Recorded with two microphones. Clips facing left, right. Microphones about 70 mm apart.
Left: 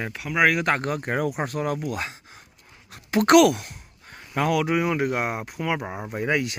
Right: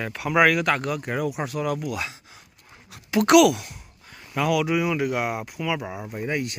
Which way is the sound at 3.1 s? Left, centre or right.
Left.